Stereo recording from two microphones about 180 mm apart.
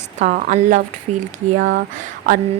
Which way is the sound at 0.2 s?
40° right (ahead or behind).